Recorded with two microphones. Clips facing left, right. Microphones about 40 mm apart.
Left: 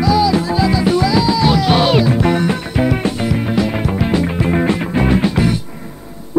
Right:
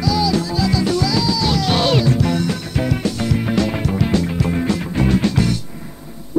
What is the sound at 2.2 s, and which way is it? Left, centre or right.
Music, left.